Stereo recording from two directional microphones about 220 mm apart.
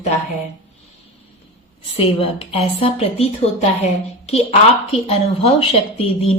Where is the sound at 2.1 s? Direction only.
25° left (ahead or behind).